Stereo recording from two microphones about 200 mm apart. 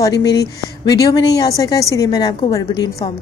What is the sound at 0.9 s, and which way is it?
A woman's voice, 20° left (ahead or behind).